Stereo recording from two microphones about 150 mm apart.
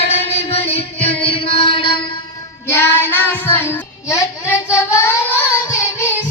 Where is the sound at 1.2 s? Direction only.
40° left (ahead or behind).